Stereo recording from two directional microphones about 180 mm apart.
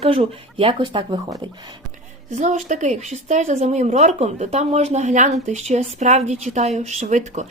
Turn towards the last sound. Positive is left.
turn(degrees=-40)  # may be behind; listen again after turning